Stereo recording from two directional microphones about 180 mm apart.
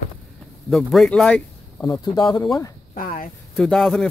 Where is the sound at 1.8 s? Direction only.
20° left (ahead or behind).